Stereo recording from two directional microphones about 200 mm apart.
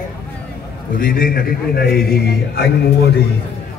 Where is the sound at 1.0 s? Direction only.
45° left (ahead or behind).